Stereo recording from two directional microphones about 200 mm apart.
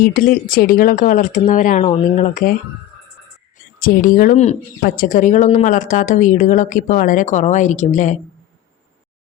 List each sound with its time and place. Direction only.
0.0 s speech: 45° left (ahead or behind)
1.8 s speech: 30° left (ahead or behind)
3.8 s speech: 45° left (ahead or behind)